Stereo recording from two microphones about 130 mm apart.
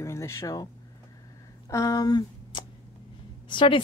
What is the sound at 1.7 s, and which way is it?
A woman's voice, 25° left (ahead or behind).